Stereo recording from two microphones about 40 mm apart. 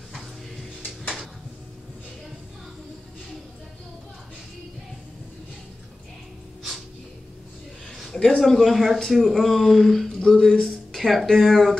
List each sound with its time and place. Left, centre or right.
8.4 s speech: centre
10.1 s speech: centre
10.6 s a sound: centre
11.0 s speech: centre